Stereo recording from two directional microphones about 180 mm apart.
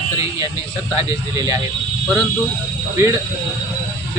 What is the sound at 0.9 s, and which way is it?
Speech, 20° right (ahead or behind).